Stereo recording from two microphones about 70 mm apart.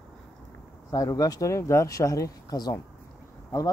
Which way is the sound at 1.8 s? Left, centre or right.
Left.